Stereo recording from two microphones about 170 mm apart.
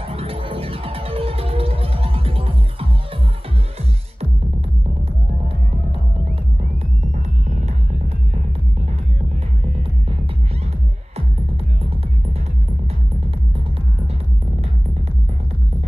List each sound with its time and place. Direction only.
0.1 s music: 35° right (ahead or behind)
7.4 s music: 45° right (ahead or behind)